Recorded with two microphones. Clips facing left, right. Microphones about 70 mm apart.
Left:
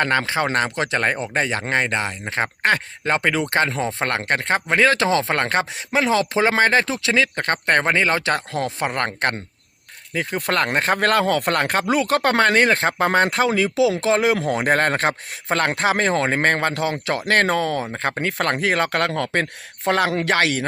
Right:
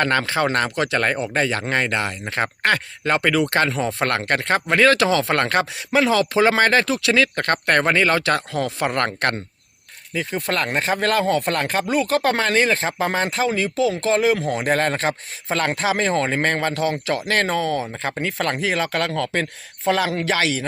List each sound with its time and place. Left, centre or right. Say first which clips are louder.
0.0 s speech: even; centre
8.9 s speech: right 1 dB; centre
10.2 s speech: left 2 dB; left
17.9 s speech: left 2 dB; left